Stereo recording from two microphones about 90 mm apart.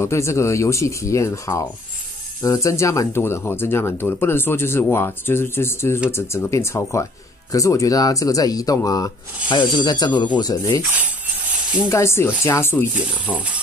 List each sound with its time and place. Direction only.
0.0 s speech: 30° left (ahead or behind)
9.5 s speech: 60° left (ahead or behind)
11.9 s speech: 30° left (ahead or behind)
13.3 s speech: 15° left (ahead or behind)